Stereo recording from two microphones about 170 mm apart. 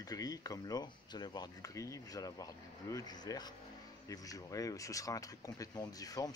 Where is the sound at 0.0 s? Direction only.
20° left (ahead or behind).